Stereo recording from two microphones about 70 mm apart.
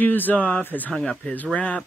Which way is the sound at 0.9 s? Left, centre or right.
Centre.